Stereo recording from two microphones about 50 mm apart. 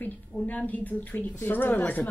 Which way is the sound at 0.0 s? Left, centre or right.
Left.